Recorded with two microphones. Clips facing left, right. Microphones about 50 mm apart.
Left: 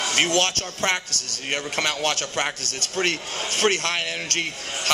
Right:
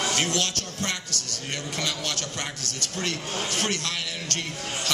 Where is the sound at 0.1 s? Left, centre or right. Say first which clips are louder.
Left 5 dB; left.